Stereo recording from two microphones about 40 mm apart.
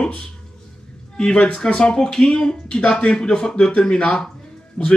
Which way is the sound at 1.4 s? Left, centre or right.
Left.